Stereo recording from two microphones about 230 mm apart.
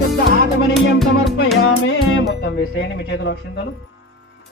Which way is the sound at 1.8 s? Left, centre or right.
Left.